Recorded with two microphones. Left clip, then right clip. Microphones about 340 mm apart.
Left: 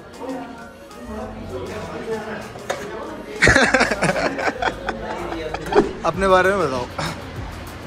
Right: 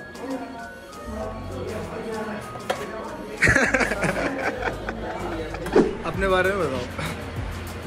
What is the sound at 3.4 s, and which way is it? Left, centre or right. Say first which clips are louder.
Snicker: left 5 dB; centre.